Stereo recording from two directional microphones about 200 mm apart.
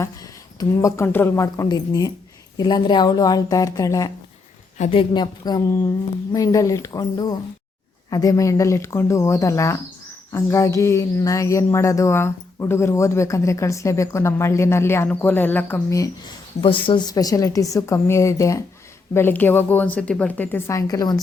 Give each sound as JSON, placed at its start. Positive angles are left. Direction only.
{"t": 0.6, "sound": "a woman's voice", "side_deg": 15}
{"t": 16.6, "sound": "speech", "side_deg": 25}